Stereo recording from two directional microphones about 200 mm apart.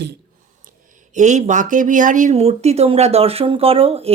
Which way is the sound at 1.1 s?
35° right (ahead or behind).